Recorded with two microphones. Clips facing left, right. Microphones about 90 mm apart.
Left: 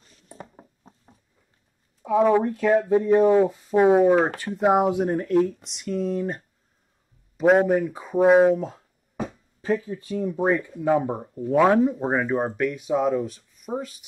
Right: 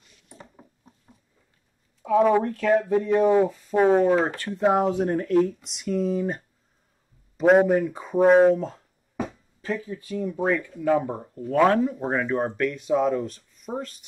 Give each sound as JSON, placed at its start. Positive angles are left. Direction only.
{"t": 0.4, "sound": "a sound", "side_deg": 40}
{"t": 2.0, "sound": "speech", "side_deg": 5}
{"t": 3.2, "sound": "speech", "side_deg": 0}
{"t": 9.8, "sound": "speech", "side_deg": 30}